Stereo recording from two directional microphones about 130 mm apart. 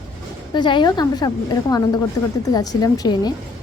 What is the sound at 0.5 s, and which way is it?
Speech, 35° left (ahead or behind).